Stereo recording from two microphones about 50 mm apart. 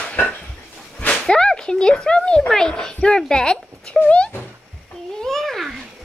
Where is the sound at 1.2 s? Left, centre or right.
Centre.